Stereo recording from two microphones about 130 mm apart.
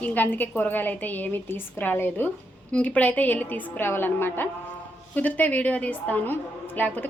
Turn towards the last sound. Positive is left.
turn(degrees=15)  # may be behind; listen again after turning